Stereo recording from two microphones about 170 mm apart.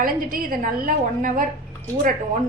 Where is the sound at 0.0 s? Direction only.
55° right (ahead or behind).